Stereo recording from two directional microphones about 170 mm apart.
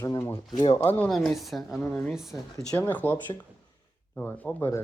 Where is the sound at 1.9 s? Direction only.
10° left (ahead or behind).